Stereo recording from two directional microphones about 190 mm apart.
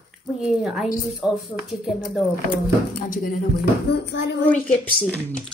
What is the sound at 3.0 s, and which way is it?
Speech, 45° left (ahead or behind).